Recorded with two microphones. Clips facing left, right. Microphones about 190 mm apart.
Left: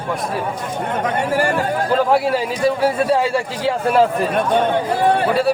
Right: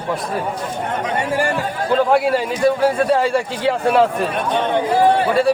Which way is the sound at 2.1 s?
Centre (ahead or behind).